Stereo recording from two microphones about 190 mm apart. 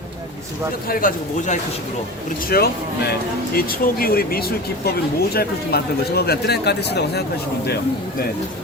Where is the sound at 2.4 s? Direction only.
55° left (ahead or behind).